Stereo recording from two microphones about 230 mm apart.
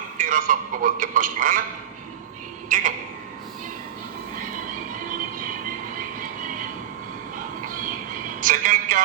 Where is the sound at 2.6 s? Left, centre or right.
Right.